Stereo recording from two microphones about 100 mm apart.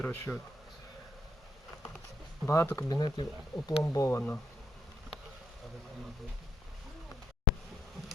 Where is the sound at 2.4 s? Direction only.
25° left (ahead or behind).